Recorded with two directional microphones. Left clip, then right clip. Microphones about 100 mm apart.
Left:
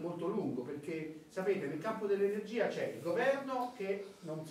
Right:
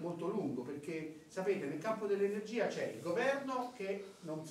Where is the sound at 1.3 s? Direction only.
10° right (ahead or behind).